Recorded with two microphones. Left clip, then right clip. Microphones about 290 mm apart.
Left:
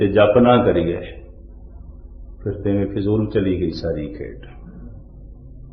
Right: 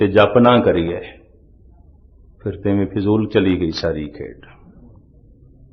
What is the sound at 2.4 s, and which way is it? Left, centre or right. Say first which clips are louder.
A man's voice: right 1 dB; right.